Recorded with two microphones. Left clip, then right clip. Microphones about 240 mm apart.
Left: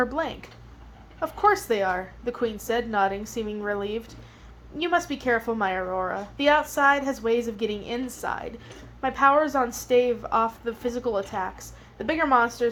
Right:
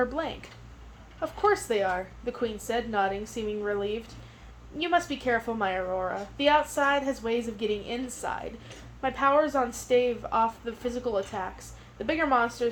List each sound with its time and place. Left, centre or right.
0.0 s a woman's voice: left